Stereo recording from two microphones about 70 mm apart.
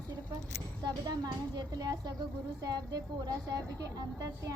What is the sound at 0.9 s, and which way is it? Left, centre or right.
A woman's voice, right.